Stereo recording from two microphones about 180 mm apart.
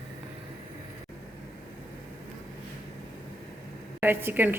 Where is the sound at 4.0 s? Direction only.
10° right (ahead or behind).